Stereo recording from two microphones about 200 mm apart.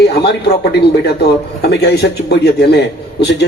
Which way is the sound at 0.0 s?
55° left (ahead or behind).